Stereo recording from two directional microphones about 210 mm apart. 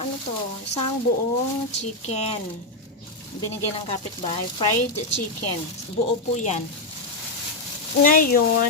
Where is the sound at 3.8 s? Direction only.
25° left (ahead or behind).